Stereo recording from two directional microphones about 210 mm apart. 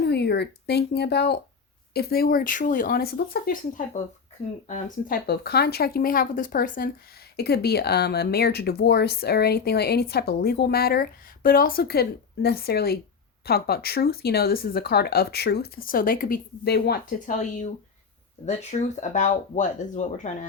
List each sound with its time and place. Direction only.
0.0 s speech: 50° left (ahead or behind); by 20.3 s 35° left (ahead or behind)